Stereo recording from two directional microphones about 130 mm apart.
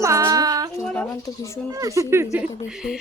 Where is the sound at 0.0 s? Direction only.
25° right (ahead or behind).